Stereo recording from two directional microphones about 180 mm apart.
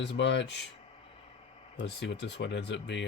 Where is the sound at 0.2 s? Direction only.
75° left (ahead or behind).